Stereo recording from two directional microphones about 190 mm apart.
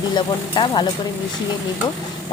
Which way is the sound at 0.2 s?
25° left (ahead or behind).